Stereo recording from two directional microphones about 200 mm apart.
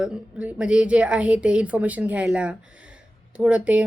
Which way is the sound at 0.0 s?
5° right (ahead or behind).